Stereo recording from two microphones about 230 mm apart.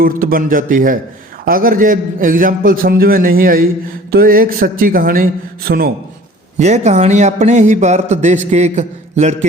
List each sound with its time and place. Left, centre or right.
0.0 s a man's voice: right
6.6 s a man's voice: right